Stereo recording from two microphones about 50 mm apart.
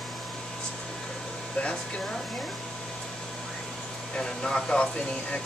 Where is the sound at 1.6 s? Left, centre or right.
Centre.